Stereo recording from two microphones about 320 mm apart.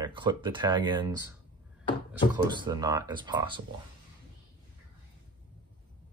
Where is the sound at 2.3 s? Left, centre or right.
Centre.